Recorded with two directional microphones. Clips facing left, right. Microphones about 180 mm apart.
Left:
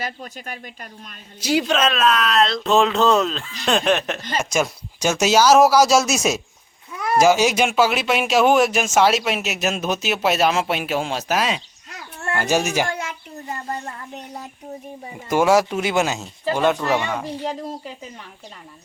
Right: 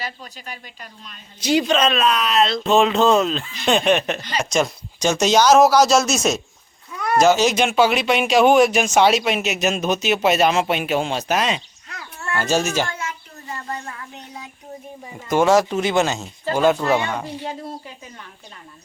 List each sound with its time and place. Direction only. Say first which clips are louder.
0.0 s speech: left 2 dB; 50° left (ahead or behind)
1.4 s speech: right 2 dB; 5° left (ahead or behind)
15.3 s speech: right 1 dB; 10° left (ahead or behind)